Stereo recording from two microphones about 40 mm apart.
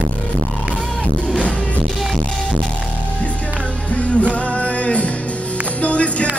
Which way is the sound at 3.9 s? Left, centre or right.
Left.